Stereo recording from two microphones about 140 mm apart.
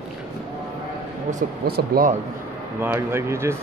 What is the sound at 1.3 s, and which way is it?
Speech, 75° right (ahead or behind).